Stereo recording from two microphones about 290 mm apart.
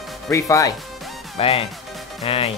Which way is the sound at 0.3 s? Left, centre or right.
Centre.